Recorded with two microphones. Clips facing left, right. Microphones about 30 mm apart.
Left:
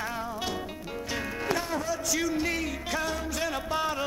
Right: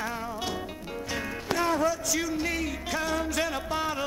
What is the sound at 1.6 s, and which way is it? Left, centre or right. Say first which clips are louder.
Music: right 7 dB; right.